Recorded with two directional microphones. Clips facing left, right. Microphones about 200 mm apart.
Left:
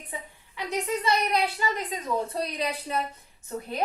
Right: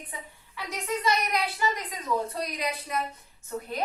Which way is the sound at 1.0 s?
30° left (ahead or behind).